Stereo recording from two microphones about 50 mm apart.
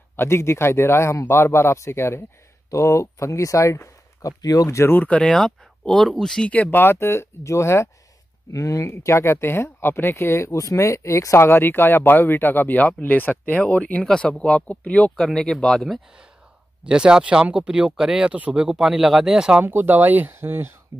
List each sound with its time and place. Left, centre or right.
0.1 s speech: left
2.7 s speech: left
4.8 s speech: left
5.2 s speech: centre
6.5 s speech: left
8.5 s speech: left
14.3 s speech: centre
15.1 s speech: centre
16.8 s speech: centre
19.6 s speech: right
20.3 s speech: right